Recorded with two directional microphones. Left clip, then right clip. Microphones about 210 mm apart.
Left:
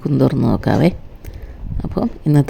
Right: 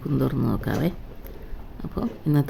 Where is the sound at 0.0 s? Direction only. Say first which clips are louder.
Left 9 dB; 30° left (ahead or behind).